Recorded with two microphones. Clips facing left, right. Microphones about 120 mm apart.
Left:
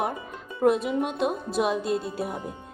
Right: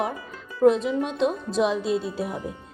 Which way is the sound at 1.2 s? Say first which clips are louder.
Right 2 dB; 60° left (ahead or behind).